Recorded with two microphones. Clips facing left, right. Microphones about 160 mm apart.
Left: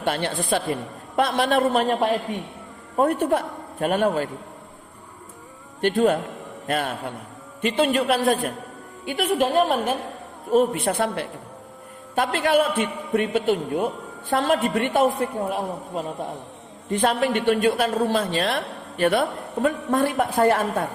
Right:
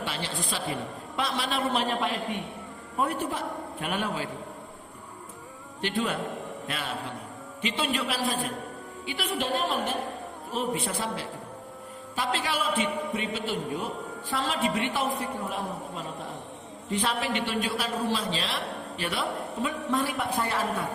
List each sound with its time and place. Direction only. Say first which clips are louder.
0.0 s a man's voice: left 8 dB; 55° left (ahead or behind)
2.9 s a man's voice: left 9 dB; 50° left (ahead or behind)
5.8 s a woman's voice: left 9 dB; 45° left (ahead or behind)
10.8 s a man's voice: left 8 dB; 60° left (ahead or behind)
16.9 s a woman's voice: left 7 dB; 50° left (ahead or behind)